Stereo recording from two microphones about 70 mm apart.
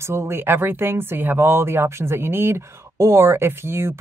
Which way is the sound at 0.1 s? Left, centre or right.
Right.